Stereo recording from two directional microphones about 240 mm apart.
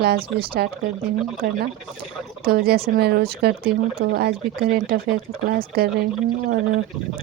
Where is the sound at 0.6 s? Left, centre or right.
Right.